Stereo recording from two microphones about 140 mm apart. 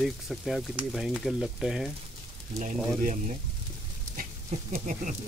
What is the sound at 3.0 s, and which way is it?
Speech, 60° right (ahead or behind).